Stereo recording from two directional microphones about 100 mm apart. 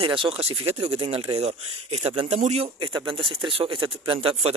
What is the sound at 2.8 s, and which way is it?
Speech, 50° right (ahead or behind).